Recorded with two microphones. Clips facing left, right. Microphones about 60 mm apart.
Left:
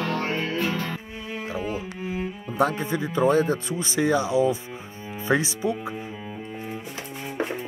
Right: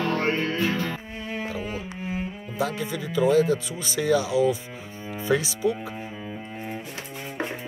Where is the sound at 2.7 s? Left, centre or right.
Left.